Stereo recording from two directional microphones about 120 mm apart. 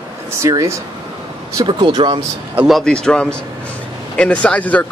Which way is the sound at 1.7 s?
40° right (ahead or behind).